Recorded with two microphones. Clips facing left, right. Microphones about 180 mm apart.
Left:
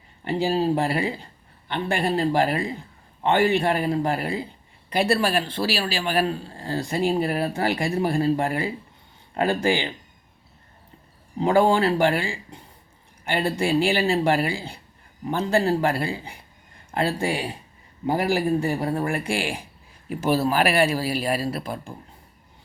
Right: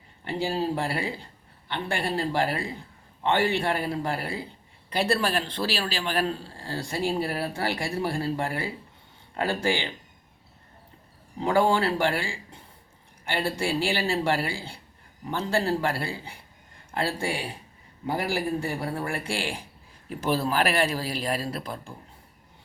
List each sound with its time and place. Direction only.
0.3 s speech: 20° left (ahead or behind)
11.3 s speech: 20° left (ahead or behind)